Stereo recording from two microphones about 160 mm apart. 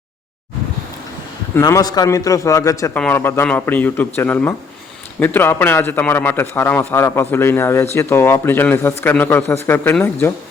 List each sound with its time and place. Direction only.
1.5 s a man's voice: 20° left (ahead or behind)
2.9 s a man's voice: 10° left (ahead or behind)